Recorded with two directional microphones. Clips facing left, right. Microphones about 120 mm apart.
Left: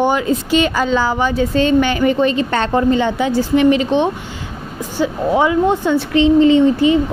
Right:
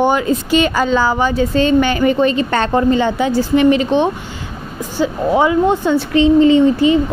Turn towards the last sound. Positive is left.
turn(degrees=-35)  # may be behind; listen again after turning